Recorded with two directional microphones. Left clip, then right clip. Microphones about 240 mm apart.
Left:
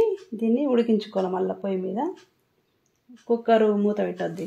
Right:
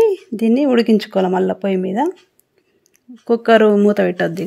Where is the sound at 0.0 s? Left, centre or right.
Right.